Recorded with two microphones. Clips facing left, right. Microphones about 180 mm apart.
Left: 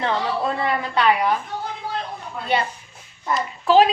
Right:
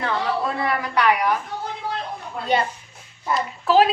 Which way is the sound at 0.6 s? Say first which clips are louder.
Even; 25° left (ahead or behind).